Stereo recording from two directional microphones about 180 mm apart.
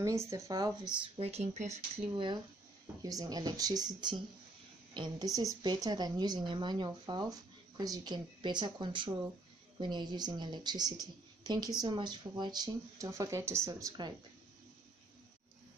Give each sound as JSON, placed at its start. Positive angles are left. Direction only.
{"t": 0.3, "sound": "a woman's voice", "side_deg": -20}